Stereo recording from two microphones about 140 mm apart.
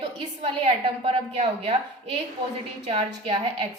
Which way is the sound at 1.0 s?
45° right (ahead or behind).